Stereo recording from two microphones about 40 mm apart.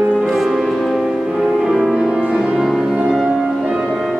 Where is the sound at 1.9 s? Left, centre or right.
Centre.